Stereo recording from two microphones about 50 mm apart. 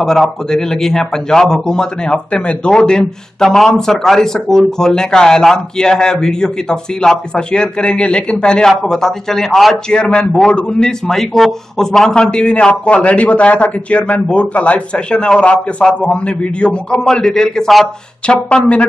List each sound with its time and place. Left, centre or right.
0.0 s a man's voice: centre
8.6 s a man's voice: centre
16.9 s a man's voice: centre
18.2 s a man's voice: left